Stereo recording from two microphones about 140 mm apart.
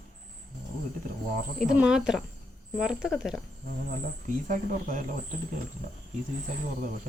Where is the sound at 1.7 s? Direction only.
5° right (ahead or behind).